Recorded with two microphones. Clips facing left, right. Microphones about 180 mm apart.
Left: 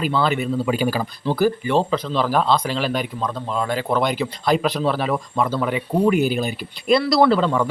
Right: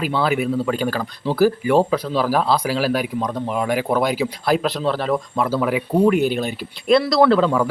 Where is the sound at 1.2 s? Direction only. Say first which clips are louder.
Right 3 dB; 5° right (ahead or behind).